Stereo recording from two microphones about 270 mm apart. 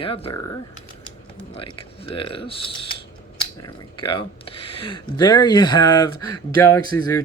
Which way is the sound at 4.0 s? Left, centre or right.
Centre.